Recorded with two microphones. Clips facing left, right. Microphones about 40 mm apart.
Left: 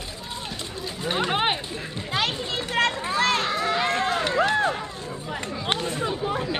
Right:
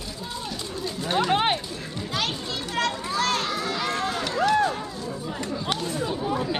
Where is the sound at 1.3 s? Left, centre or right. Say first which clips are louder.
Right 1 dB; centre.